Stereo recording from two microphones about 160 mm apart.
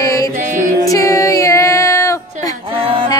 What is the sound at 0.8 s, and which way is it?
Female singing, 20° left (ahead or behind).